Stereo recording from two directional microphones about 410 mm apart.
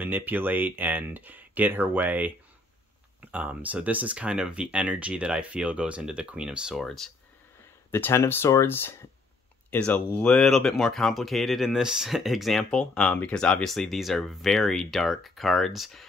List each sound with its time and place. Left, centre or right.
0.0 s speech: centre